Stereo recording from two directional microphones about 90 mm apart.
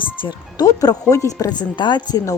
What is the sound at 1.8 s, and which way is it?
Speech, 55° left (ahead or behind).